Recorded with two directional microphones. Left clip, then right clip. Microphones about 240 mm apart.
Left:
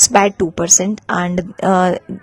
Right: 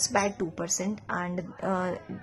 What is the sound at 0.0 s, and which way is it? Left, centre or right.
A woman's voice, left.